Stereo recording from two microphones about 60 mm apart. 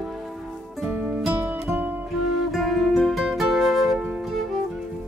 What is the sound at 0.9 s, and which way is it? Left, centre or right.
Music, right.